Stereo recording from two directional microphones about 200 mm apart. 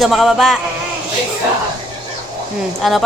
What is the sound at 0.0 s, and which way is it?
Speech, centre (ahead or behind).